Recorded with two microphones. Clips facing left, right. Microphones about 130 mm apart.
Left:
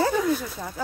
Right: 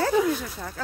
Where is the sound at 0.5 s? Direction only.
10° left (ahead or behind).